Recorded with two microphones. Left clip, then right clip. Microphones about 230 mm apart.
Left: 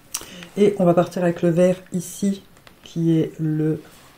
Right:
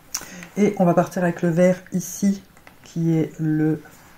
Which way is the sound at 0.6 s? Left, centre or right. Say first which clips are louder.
Left 2 dB; left.